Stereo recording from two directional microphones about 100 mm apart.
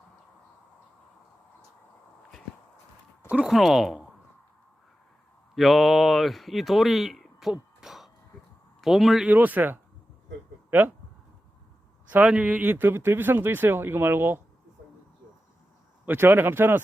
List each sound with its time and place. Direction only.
3.2 s speech: 15° right (ahead or behind)
3.5 s speech: 5° right (ahead or behind)
5.5 s speech: centre (ahead or behind)
9.3 s speech: 15° right (ahead or behind)
12.1 s speech: 10° right (ahead or behind)
16.0 s speech: 20° right (ahead or behind)